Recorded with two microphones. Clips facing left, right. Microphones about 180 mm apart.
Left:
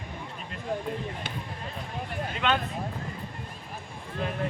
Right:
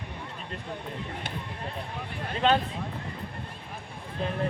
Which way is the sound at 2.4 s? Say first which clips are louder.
Right 4 dB; 35° right (ahead or behind).